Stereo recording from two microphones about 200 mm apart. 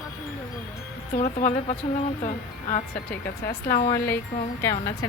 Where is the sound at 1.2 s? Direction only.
35° left (ahead or behind).